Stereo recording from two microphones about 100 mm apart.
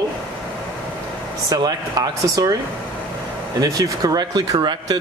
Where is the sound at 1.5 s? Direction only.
40° right (ahead or behind).